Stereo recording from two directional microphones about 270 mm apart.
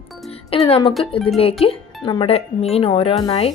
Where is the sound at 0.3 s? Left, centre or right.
Left.